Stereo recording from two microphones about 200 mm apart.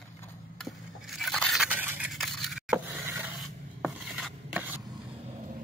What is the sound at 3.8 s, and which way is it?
Chopping, centre (ahead or behind).